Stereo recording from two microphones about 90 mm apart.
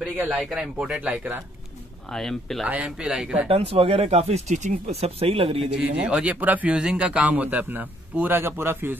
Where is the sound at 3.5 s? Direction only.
90° right.